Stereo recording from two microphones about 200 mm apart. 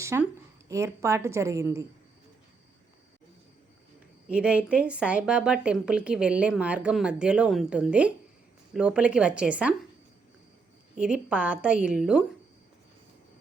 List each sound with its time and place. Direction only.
0.0 s a woman's voice: 15° right (ahead or behind)
4.3 s speech: 5° right (ahead or behind)
10.9 s speech: 5° right (ahead or behind)